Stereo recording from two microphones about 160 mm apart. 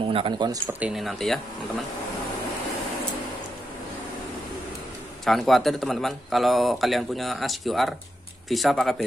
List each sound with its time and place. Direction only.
0.0 s speech: 35° right (ahead or behind)
0.7 s a man's voice: 5° right (ahead or behind)
5.2 s a man's voice: centre (ahead or behind)